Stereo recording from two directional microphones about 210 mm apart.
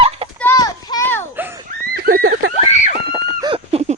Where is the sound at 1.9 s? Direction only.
45° right (ahead or behind).